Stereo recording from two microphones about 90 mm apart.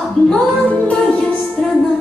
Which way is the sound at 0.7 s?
15° left (ahead or behind).